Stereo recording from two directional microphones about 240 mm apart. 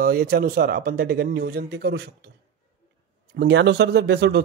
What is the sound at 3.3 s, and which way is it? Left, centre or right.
Speech, right.